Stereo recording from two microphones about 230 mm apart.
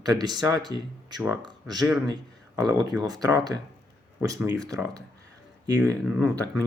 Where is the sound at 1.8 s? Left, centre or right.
Centre.